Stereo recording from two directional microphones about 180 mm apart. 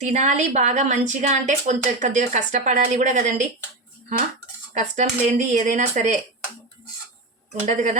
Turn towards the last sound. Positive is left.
turn(degrees=-40)  # may be behind; listen again after turning